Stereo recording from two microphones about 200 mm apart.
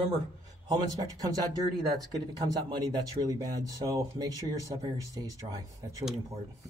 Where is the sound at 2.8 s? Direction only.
20° right (ahead or behind).